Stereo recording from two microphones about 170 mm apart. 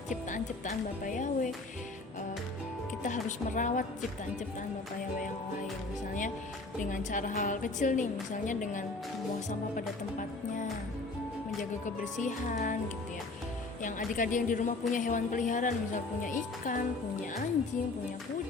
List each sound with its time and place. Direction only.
0.1 s a woman's voice: 50° left (ahead or behind)
3.0 s a woman's voice: 50° left (ahead or behind)
6.8 s a woman's voice: 50° left (ahead or behind)
12.1 s a woman's voice: 45° left (ahead or behind)
13.8 s a woman's voice: 50° left (ahead or behind)